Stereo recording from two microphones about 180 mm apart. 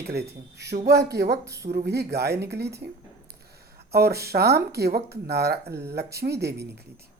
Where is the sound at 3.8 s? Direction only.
60° right (ahead or behind).